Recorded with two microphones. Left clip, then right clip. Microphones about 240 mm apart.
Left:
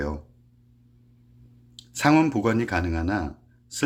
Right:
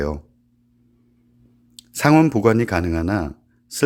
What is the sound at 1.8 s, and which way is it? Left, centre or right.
Speech, right.